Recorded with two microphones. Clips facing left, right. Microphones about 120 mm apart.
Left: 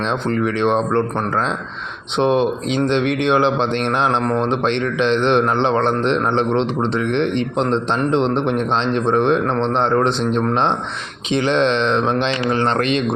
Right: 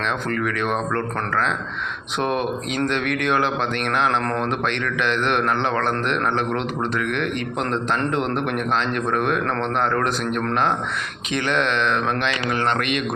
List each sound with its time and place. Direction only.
0.0 s a man's voice: 25° left (ahead or behind)